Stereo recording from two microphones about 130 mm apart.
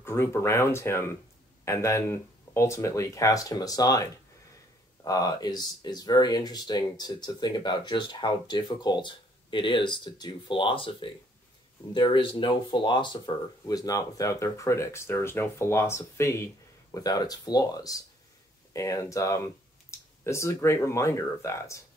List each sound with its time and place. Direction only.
0.0 s speech: 20° left (ahead or behind)